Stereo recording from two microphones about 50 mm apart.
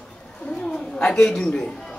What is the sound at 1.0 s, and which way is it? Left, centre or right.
Speech, left.